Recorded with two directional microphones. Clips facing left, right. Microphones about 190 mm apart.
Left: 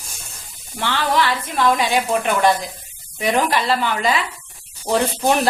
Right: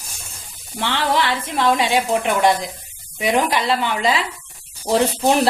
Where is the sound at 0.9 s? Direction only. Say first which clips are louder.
Left 1 dB; 25° right (ahead or behind).